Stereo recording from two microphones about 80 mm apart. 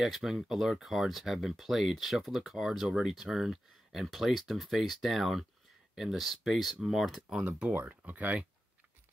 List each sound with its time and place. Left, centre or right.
0.0 s speech: centre
7.4 s speech: centre